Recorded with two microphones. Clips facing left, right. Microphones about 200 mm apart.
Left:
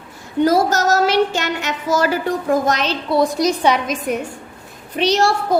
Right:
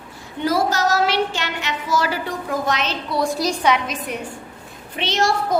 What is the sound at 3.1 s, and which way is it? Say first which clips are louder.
Speech: left 6 dB; 25° left (ahead or behind).